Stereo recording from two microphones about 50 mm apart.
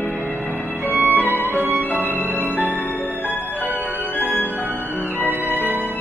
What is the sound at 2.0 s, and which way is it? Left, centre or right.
Music, left.